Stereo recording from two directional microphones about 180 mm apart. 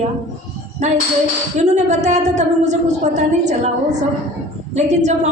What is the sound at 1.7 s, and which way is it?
Speech, 40° right (ahead or behind).